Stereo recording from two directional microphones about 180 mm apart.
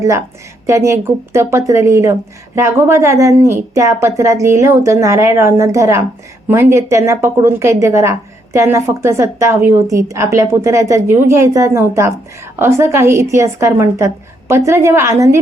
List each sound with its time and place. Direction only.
0.0 s a woman's voice: 15° right (ahead or behind)